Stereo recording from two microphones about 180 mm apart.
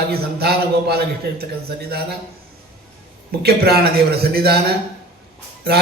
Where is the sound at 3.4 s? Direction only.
60° right (ahead or behind).